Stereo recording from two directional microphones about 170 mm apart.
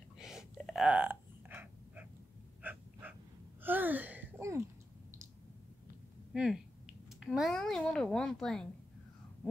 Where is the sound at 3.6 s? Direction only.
10° right (ahead or behind).